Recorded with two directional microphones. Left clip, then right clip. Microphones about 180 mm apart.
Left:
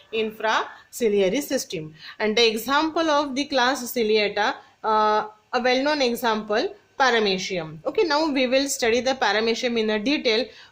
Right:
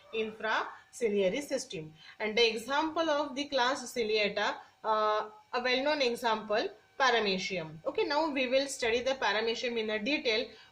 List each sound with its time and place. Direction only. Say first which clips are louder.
0.1 s speech: left 9 dB; 70° left (ahead or behind); by 10.4 s 50° left (ahead or behind)